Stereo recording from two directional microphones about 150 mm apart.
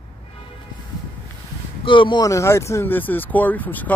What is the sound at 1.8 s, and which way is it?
Speech, 30° left (ahead or behind).